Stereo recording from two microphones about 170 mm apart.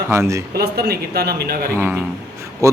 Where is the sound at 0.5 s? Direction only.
70° right (ahead or behind).